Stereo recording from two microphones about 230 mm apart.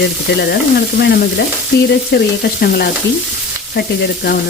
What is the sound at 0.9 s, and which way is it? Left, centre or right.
Frying, left.